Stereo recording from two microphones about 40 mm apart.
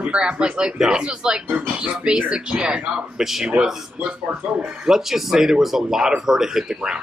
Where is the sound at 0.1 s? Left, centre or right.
Right.